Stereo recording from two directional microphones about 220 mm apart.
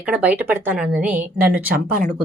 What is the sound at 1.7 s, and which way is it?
Speech, 40° right (ahead or behind).